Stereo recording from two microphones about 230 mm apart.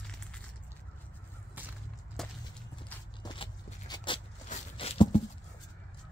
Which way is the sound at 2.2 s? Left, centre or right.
Centre.